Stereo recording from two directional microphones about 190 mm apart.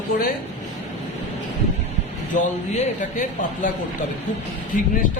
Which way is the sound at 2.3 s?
40° left (ahead or behind).